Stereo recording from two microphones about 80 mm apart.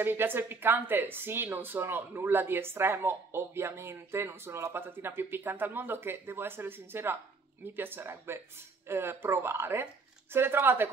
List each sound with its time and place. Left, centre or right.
0.0 s speech: right